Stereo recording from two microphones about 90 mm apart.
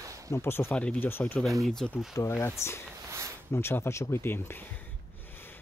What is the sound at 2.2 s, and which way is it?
Speech, 35° left (ahead or behind).